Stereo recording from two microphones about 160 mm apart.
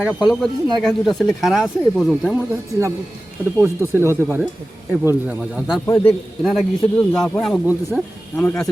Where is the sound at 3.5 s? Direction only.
15° right (ahead or behind).